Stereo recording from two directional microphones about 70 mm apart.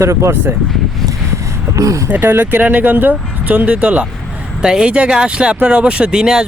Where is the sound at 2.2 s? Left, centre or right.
Right.